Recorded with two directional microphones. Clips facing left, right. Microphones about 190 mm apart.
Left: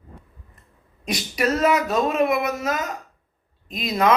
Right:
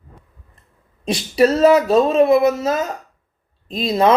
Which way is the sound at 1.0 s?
30° right (ahead or behind).